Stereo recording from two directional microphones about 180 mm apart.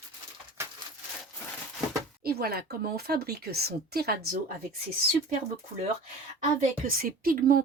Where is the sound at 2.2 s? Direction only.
60° right (ahead or behind).